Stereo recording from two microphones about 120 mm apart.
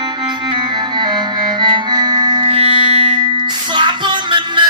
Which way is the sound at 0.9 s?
40° right (ahead or behind).